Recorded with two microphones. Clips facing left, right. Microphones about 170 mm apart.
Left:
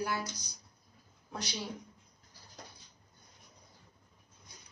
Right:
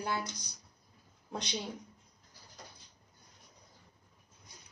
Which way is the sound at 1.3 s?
20° right (ahead or behind).